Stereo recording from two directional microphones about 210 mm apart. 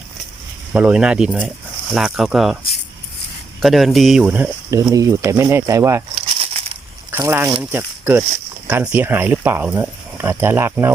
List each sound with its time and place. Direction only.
0.7 s speech: 5° right (ahead or behind)
3.6 s speech: centre (ahead or behind)
6.1 s crumpling: 30° right (ahead or behind)
7.1 s speech: 10° right (ahead or behind)